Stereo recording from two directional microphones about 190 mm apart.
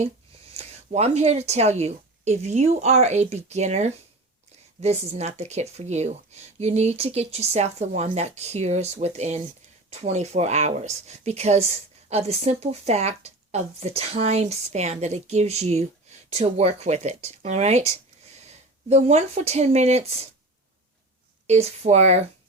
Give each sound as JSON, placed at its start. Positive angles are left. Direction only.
{"t": 0.5, "sound": "speech", "side_deg": -35}
{"t": 21.4, "sound": "speech", "side_deg": -35}